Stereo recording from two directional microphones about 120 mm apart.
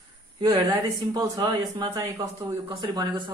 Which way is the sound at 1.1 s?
30° right (ahead or behind).